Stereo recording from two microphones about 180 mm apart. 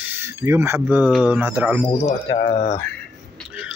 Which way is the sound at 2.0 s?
40° left (ahead or behind).